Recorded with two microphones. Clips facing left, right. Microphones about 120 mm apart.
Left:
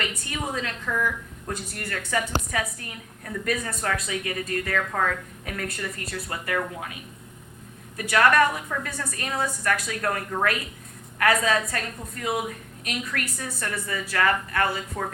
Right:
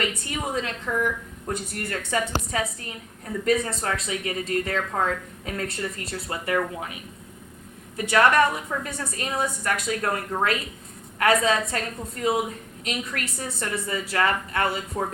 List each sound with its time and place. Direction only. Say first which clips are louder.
0.3 s a woman's voice: right 2 dB; 25° right (ahead or behind)